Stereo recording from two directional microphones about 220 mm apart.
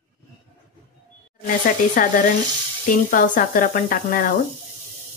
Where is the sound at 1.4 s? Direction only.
40° left (ahead or behind).